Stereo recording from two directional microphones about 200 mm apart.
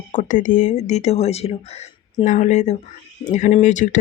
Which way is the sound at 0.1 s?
40° left (ahead or behind).